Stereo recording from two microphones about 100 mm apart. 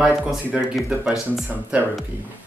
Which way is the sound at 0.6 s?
5° right (ahead or behind).